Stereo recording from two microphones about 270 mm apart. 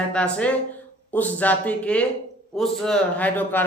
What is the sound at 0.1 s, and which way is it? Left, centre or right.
Speech, centre.